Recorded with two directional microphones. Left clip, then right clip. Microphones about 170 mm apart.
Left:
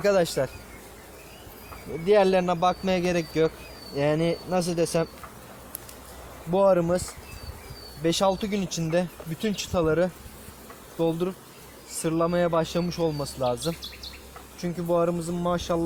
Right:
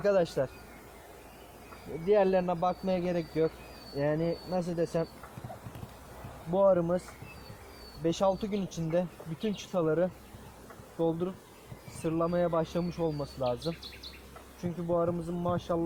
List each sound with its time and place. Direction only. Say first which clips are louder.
0.0 s speech: left 5 dB; 20° left (ahead or behind)
2.0 s speech: left 5 dB; 20° left (ahead or behind)
6.5 s speech: left 4 dB; 20° left (ahead or behind)
8.0 s speech: left 5 dB; 20° left (ahead or behind)
14.6 s speech: left 6 dB; 20° left (ahead or behind)